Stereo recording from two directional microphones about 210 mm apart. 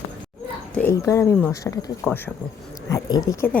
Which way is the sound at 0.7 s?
10° left (ahead or behind).